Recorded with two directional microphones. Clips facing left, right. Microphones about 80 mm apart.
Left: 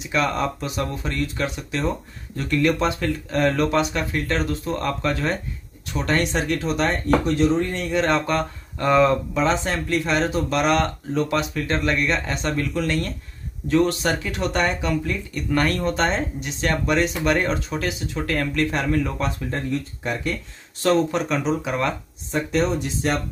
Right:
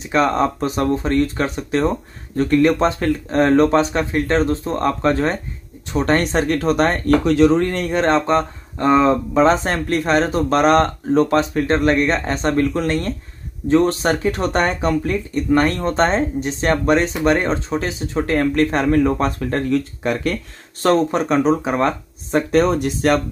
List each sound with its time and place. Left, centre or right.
0.0 s speech: right
7.2 s speech: right
7.9 s speech: right
19.4 s speech: right
20.8 s speech: right
22.3 s speech: right